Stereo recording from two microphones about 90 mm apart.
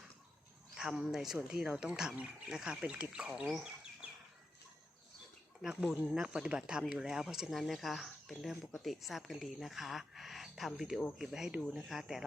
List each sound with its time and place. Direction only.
0.8 s speech: 5° right (ahead or behind)
5.6 s speech: 5° right (ahead or behind)